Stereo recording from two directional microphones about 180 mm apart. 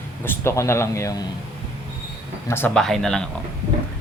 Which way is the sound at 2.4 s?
10° left (ahead or behind).